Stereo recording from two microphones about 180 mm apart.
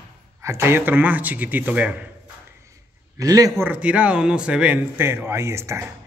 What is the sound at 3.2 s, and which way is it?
A man's voice, 20° right (ahead or behind).